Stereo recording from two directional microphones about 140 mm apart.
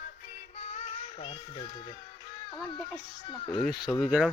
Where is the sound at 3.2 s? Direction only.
35° left (ahead or behind).